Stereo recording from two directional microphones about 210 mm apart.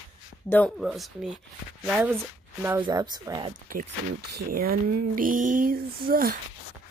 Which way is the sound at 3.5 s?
40° right (ahead or behind).